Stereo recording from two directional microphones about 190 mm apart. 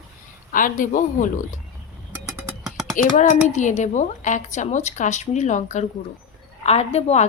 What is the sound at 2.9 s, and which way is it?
Speech, 40° left (ahead or behind).